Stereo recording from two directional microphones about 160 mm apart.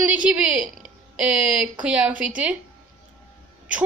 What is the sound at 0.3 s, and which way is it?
A woman's voice, 10° right (ahead or behind).